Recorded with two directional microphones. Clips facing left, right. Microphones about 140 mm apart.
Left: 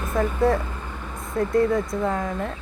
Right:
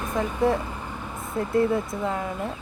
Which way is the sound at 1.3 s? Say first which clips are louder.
Left 2 dB; 25° right (ahead or behind).